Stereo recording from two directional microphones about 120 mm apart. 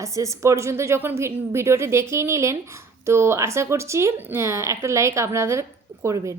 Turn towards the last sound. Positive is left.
turn(degrees=-25)  # may be behind; listen again after turning